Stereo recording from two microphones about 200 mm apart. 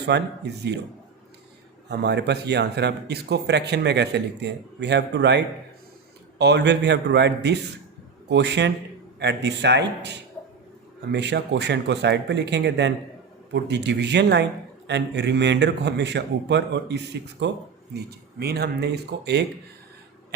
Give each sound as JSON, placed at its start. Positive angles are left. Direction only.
{"t": 0.1, "sound": "speech", "side_deg": -60}
{"t": 1.9, "sound": "speech", "side_deg": -55}
{"t": 6.4, "sound": "speech", "side_deg": -60}